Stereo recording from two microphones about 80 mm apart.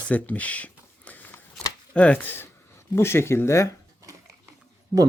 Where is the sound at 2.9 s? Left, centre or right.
Left.